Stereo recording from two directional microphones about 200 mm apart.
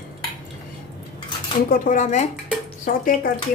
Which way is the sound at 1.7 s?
40° left (ahead or behind).